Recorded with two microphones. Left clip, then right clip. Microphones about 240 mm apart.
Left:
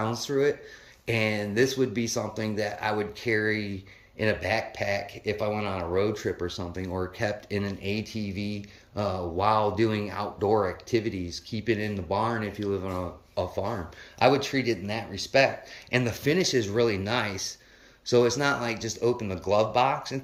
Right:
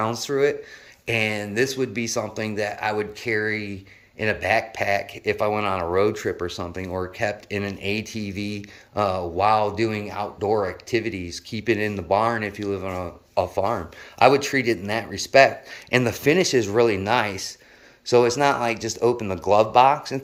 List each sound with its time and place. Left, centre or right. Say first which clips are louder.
0.0 s speech: right 4 dB; centre